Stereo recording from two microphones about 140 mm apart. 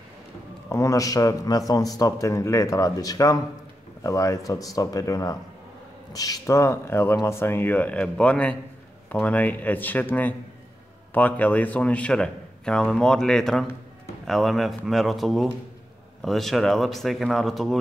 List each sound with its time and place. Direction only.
0.7 s a man's voice: 20° left (ahead or behind); by 17.7 s centre (ahead or behind)